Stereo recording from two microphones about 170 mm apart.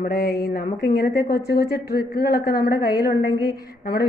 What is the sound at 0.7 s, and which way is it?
A woman's voice, 80° left.